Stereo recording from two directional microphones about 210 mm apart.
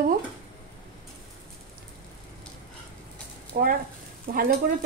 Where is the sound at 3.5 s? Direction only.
45° right (ahead or behind).